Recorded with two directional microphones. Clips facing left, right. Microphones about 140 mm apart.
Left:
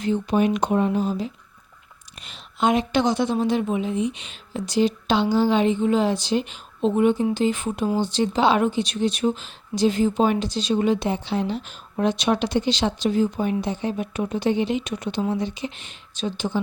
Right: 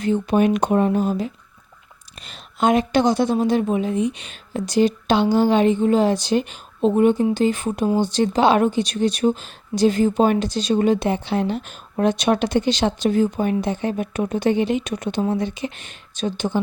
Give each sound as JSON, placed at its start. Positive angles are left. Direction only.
{"t": 0.0, "sound": "speech", "side_deg": -55}
{"t": 7.9, "sound": "speech", "side_deg": -15}
{"t": 8.1, "sound": "speech", "side_deg": -50}